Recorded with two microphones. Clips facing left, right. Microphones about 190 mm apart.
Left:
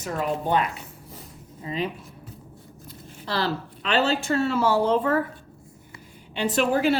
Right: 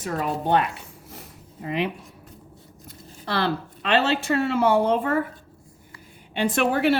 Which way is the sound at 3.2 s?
60° right (ahead or behind).